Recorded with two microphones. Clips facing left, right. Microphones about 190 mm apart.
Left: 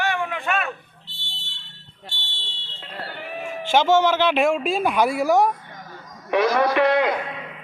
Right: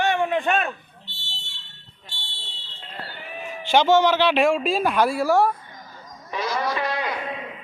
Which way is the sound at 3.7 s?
10° left (ahead or behind).